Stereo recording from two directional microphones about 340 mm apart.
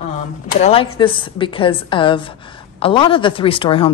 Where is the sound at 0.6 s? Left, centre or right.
Centre.